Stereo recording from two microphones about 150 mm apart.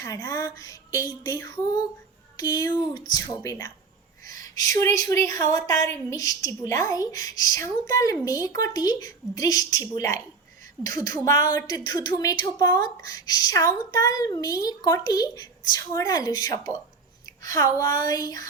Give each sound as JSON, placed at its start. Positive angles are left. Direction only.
{"t": 0.0, "sound": "a woman's voice", "side_deg": 25}